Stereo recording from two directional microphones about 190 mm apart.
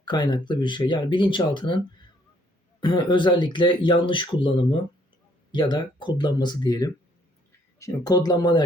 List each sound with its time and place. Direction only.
0.0 s speech: 20° left (ahead or behind)
2.8 s speech: 25° left (ahead or behind)